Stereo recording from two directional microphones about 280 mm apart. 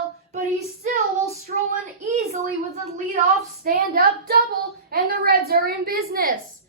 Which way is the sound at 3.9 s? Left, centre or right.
Right.